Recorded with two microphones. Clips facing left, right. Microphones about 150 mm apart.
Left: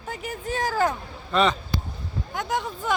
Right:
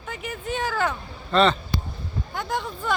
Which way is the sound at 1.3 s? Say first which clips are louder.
Right 2 dB; 10° left (ahead or behind).